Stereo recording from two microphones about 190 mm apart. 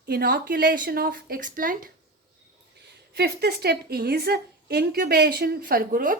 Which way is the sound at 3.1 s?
60° right (ahead or behind).